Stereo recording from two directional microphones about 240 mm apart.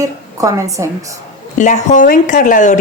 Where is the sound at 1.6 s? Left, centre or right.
Left.